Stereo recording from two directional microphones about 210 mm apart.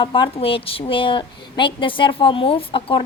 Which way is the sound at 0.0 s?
25° left (ahead or behind).